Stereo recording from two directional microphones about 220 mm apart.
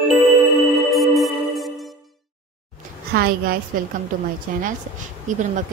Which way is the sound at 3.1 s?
45° right (ahead or behind).